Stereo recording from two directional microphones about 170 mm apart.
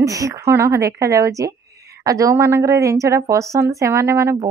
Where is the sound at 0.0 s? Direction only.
20° right (ahead or behind).